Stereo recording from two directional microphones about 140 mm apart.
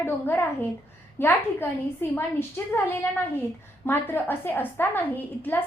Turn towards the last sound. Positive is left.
turn(degrees=15)  # may be behind; listen again after turning